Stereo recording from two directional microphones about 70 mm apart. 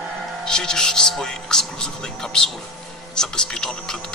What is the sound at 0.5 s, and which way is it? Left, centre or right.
Speech, centre.